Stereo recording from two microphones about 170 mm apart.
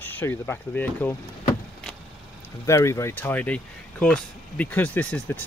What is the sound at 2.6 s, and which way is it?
Speech, 15° left (ahead or behind).